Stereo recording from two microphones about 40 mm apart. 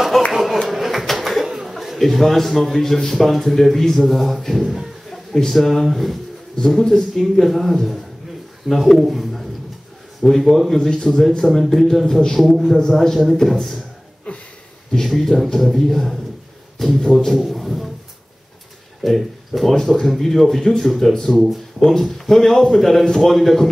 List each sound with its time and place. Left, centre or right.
0.3 s a sound: centre
0.7 s speech: centre
6.8 s a man's voice: centre
12.4 s speech: centre
14.3 s a sound: left
15.0 s a man's voice: centre
17.3 s a man's voice: centre
19.0 s a man's voice: centre
21.4 s speech: centre
21.8 s a man's voice: centre